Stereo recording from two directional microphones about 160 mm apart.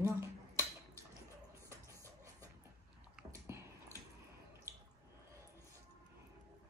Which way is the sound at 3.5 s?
15° right (ahead or behind).